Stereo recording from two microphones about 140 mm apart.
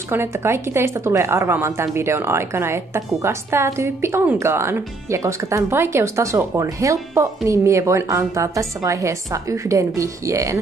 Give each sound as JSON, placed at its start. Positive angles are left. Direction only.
{"t": 0.1, "sound": "a woman's voice", "side_deg": -15}